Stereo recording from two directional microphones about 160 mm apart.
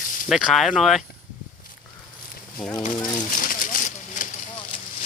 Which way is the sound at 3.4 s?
55° left (ahead or behind).